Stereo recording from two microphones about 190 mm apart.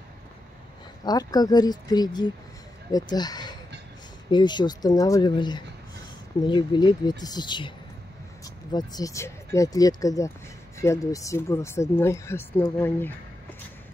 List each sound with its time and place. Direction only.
1.0 s speech: 20° left (ahead or behind)
8.7 s speech: 20° left (ahead or behind)